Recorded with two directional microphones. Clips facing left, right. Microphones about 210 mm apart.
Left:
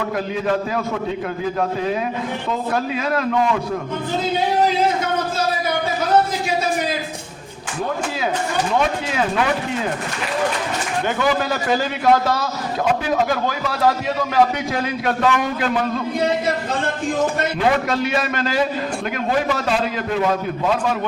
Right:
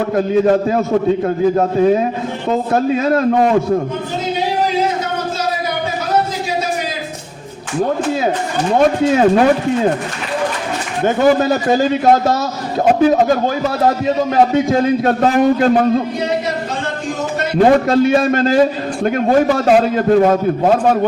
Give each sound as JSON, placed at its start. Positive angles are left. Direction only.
{"t": 0.0, "sound": "a man's voice", "side_deg": -35}
{"t": 8.7, "sound": "a man's voice", "side_deg": -40}
{"t": 11.0, "sound": "a man's voice", "side_deg": -40}
{"t": 12.1, "sound": "a man's voice", "side_deg": -25}
{"t": 12.8, "sound": "a man's voice", "side_deg": -45}
{"t": 15.2, "sound": "a man's voice", "side_deg": -45}
{"t": 17.6, "sound": "a man's voice", "side_deg": -35}